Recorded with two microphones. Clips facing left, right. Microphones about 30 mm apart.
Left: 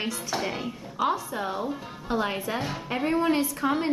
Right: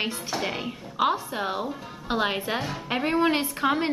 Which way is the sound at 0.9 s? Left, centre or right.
Right.